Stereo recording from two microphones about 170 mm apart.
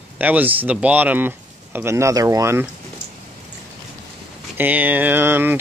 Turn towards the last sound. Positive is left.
turn(degrees=-10)  # may be behind; listen again after turning